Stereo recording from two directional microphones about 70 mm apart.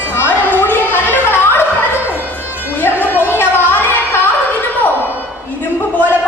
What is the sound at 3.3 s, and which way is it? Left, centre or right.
Carnatic music, left.